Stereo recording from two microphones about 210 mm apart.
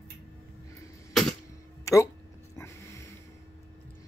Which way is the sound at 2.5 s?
15° left (ahead or behind).